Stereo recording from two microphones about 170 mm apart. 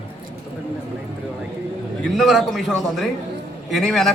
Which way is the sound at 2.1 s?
Centre (ahead or behind).